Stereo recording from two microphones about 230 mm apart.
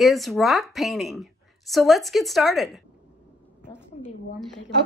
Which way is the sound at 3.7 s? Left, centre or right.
Centre.